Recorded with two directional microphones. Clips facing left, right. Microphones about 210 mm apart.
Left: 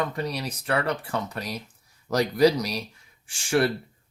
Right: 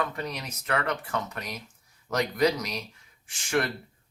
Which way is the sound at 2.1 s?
35° left (ahead or behind).